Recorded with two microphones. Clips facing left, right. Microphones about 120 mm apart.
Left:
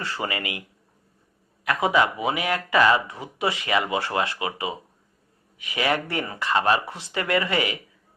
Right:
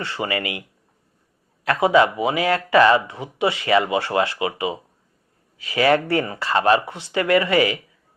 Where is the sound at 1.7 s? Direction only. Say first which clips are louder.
Right 5 dB; 25° right (ahead or behind).